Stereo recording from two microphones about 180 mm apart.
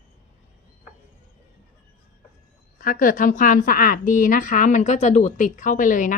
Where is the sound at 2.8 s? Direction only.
50° left (ahead or behind).